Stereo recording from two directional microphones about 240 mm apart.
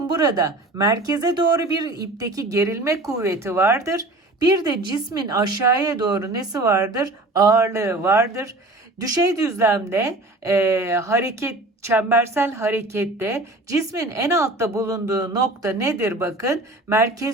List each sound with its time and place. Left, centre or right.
0.2 s speech: centre